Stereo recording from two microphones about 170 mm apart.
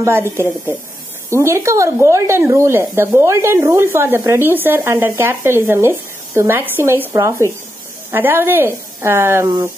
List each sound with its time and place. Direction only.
0.0 s speech: 15° right (ahead or behind)